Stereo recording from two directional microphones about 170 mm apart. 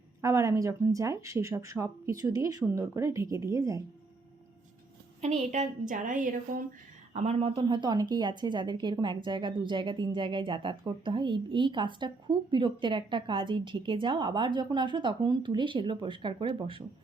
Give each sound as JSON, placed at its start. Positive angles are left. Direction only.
{"t": 0.2, "sound": "speech", "side_deg": -15}
{"t": 5.2, "sound": "a woman's voice", "side_deg": -45}
{"t": 7.1, "sound": "speech", "side_deg": -40}